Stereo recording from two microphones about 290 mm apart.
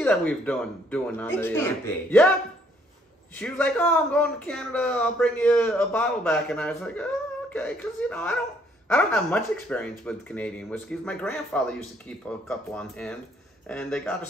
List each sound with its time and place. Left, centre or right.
0.0 s a man's voice: centre
3.3 s a man's voice: centre